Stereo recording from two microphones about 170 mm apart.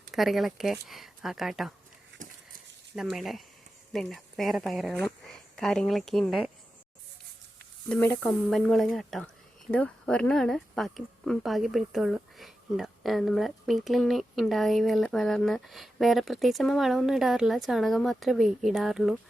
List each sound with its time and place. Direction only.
0.1 s speech: centre (ahead or behind)
2.2 s a sound: 50° right (ahead or behind)
2.9 s speech: 5° right (ahead or behind)
7.9 s speech: 10° left (ahead or behind)